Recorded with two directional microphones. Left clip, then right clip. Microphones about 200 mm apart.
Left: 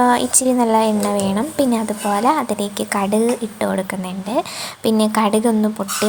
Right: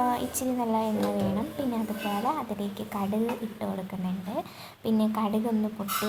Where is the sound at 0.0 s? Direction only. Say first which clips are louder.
Left 12 dB; 25° left (ahead or behind).